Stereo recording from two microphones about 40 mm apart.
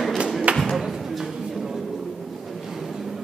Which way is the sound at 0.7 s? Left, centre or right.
Centre.